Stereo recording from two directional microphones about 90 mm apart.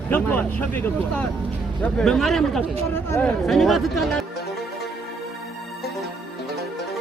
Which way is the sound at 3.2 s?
Centre (ahead or behind).